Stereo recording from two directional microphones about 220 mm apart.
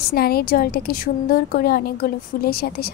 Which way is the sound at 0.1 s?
45° left (ahead or behind).